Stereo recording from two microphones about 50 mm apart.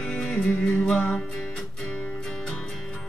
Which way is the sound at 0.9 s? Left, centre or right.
Left.